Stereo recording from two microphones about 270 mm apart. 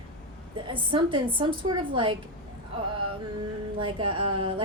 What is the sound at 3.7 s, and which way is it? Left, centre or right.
Speech, centre.